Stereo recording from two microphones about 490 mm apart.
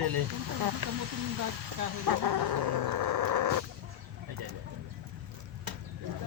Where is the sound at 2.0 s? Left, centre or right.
Right.